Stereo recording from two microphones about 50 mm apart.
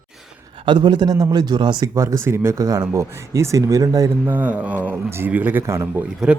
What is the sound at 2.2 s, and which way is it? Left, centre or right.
Speech, right.